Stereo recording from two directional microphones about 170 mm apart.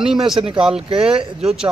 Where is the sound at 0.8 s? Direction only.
35° right (ahead or behind).